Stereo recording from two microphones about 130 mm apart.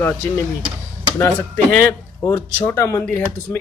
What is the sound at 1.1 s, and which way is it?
Speech, 15° left (ahead or behind).